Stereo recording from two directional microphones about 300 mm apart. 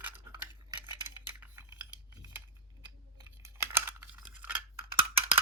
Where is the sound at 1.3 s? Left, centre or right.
Centre.